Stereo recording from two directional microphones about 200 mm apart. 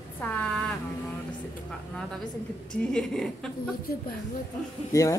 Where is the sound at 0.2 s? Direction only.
5° left (ahead or behind).